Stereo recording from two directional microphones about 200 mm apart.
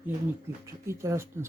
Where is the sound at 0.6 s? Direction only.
15° right (ahead or behind).